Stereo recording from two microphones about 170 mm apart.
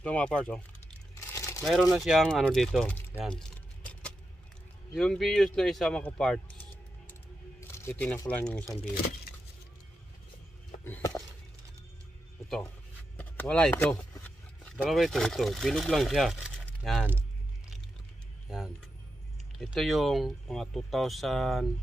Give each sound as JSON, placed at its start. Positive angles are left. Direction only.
{"t": 0.0, "sound": "speech", "side_deg": 5}
{"t": 1.3, "sound": "crumpling", "side_deg": 15}
{"t": 1.6, "sound": "speech", "side_deg": 0}
{"t": 3.3, "sound": "keys jangling", "side_deg": 5}
{"t": 4.9, "sound": "speech", "side_deg": 0}
{"t": 7.6, "sound": "music", "side_deg": 15}
{"t": 8.3, "sound": "speech", "side_deg": 5}
{"t": 10.8, "sound": "a sound", "side_deg": 15}
{"t": 13.2, "sound": "speech", "side_deg": 10}
{"t": 14.1, "sound": "a sound", "side_deg": 10}
{"t": 14.9, "sound": "speech", "side_deg": 0}
{"t": 18.5, "sound": "music", "side_deg": 0}
{"t": 19.6, "sound": "speech", "side_deg": 0}